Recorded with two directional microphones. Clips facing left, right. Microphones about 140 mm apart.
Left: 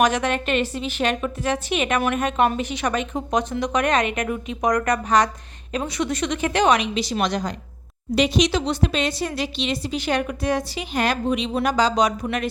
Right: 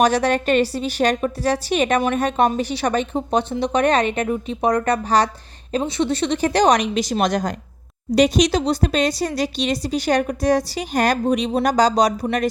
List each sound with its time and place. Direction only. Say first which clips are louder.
0.0 s speech: right 3 dB; 35° right (ahead or behind)